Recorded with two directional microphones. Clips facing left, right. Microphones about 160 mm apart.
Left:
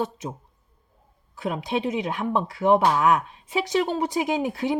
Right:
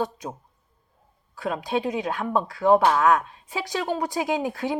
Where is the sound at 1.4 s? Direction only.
20° left (ahead or behind).